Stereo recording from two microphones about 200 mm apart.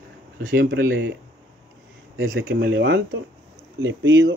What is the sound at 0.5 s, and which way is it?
Speech, 55° right (ahead or behind).